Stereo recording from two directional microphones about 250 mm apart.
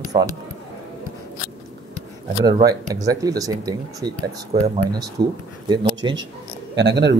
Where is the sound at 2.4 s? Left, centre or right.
Centre.